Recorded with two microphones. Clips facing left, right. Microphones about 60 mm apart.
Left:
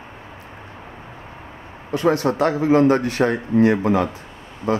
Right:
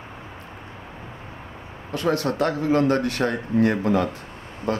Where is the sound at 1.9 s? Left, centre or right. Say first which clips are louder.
Left 5 dB; centre.